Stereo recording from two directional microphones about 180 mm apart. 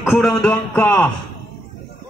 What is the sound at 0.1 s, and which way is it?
Speech, centre (ahead or behind).